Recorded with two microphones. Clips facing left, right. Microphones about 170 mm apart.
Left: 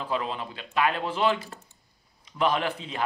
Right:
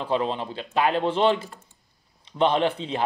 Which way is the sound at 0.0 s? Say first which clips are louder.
Right 5 dB; 30° right (ahead or behind).